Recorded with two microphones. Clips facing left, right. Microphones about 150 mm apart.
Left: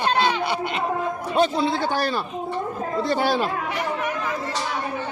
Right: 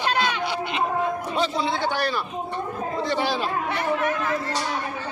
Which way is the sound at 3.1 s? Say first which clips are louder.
Left 4 dB; 45° left (ahead or behind).